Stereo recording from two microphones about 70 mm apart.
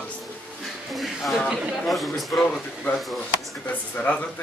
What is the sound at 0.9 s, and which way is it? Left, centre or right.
A man's voice, centre.